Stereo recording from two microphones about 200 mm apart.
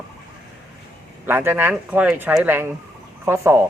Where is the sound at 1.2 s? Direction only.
10° right (ahead or behind).